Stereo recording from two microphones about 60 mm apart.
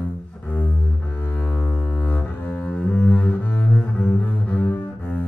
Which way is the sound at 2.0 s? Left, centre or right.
Left.